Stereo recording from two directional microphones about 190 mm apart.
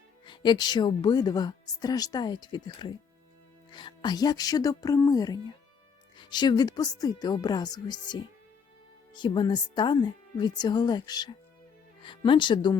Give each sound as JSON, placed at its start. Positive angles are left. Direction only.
{"t": 0.3, "sound": "speech", "side_deg": 25}